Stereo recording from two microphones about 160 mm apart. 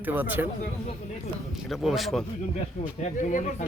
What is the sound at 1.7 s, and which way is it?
Speech, centre (ahead or behind).